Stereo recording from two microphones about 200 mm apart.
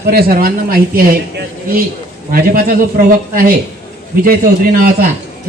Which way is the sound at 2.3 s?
45° right (ahead or behind).